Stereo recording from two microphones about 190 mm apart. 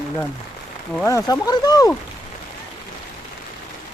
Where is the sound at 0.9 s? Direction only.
15° left (ahead or behind).